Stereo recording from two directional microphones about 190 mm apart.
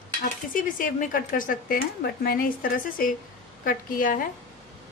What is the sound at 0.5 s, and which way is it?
A woman's voice, 45° left (ahead or behind).